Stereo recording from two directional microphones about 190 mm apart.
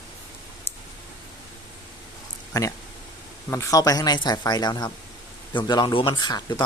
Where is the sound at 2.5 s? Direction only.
15° left (ahead or behind).